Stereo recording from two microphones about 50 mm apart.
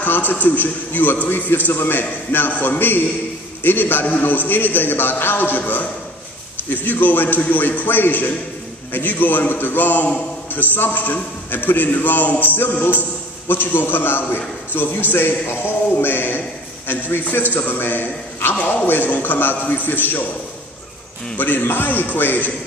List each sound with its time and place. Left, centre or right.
0.0 s a man's voice: left
6.7 s a man's voice: left
13.5 s a man's voice: left
21.4 s a man's voice: left